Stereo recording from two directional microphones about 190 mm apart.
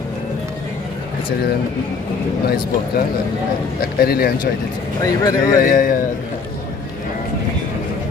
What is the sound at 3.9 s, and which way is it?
Speech, 55° left (ahead or behind).